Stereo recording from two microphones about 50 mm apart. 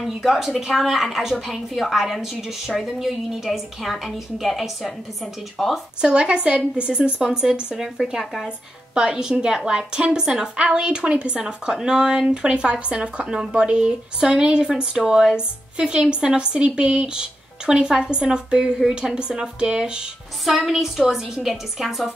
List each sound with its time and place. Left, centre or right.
0.0 s a woman's voice: centre
5.9 s a woman's voice: centre
8.9 s speech: centre
20.4 s a woman's voice: centre